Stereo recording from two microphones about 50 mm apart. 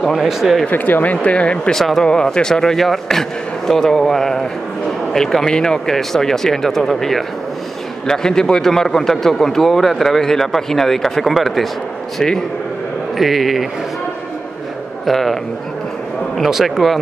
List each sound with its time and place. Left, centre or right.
0.2 s speech: centre
0.7 s speech: left
1.7 s a man's voice: centre
13.2 s speech: centre
15.0 s speech: centre
16.4 s speech: centre